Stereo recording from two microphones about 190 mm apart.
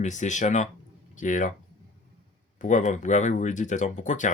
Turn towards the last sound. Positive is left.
turn(degrees=40)  # may be behind; listen again after turning